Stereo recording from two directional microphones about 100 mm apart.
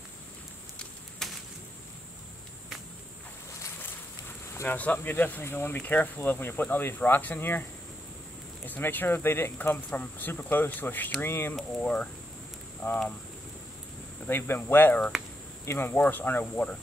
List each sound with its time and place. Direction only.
0.7 s a sound: centre (ahead or behind)
4.6 s speech: 15° left (ahead or behind)
8.6 s speech: 20° left (ahead or behind)
12.8 s speech: 30° left (ahead or behind)
14.2 s speech: 20° left (ahead or behind)